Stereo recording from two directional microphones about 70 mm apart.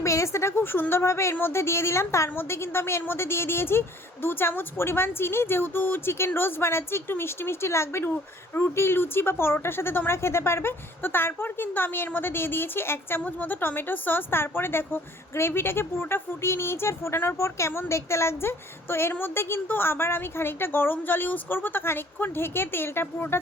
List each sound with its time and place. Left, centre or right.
0.0 s a woman's voice: left